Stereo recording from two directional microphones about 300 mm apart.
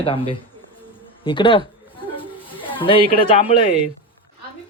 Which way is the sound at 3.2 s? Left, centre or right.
Centre.